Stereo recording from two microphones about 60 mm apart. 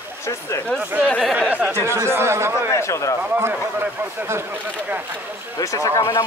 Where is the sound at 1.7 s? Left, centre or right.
Right.